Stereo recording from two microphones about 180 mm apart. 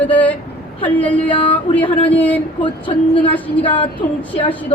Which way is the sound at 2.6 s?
30° left (ahead or behind).